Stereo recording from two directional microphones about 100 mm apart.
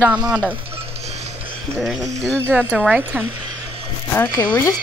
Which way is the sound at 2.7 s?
10° right (ahead or behind).